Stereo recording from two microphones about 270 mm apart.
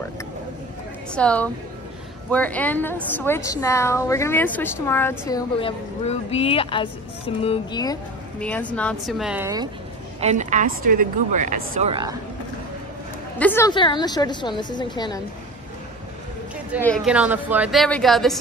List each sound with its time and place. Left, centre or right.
1.1 s a woman's voice: centre
10.2 s speech: right
11.9 s speech: centre
13.4 s speech: centre
16.8 s a woman's voice: centre